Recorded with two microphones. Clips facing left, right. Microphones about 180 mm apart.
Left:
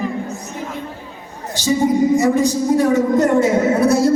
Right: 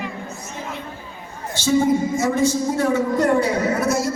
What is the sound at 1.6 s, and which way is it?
Speech, 15° left (ahead or behind).